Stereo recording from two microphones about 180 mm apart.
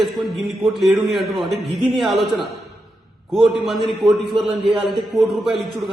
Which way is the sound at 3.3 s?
Centre (ahead or behind).